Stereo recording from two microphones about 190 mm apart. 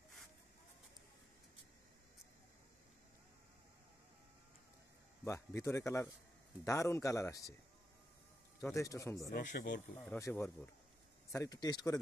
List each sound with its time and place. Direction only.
5.2 s speech: 15° left (ahead or behind)
8.5 s speech: 15° left (ahead or behind)
9.3 s speech: 45° left (ahead or behind)
9.9 s speech: 15° left (ahead or behind)